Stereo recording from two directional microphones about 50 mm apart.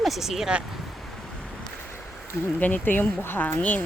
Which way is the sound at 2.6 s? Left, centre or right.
Left.